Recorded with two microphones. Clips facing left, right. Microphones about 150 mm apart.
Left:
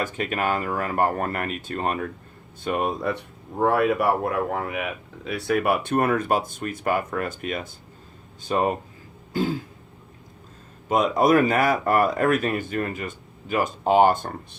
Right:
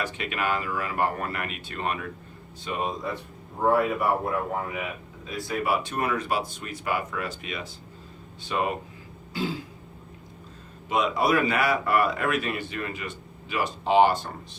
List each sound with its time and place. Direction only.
0.0 s speech: 45° left (ahead or behind)
2.6 s speech: 55° left (ahead or behind)
3.7 s speech: 80° left
5.2 s speech: 70° left (ahead or behind); by 8.7 s 40° left (ahead or behind)
9.3 s throat clearing: 50° left (ahead or behind)
10.8 s speech: 45° left (ahead or behind)